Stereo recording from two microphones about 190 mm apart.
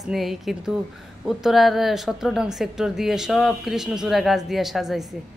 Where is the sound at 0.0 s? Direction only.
Centre (ahead or behind).